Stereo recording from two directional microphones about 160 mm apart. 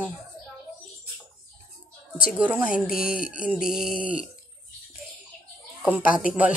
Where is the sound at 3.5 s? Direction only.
Centre (ahead or behind).